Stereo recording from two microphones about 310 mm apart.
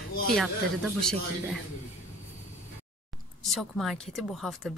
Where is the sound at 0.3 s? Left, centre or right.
Centre.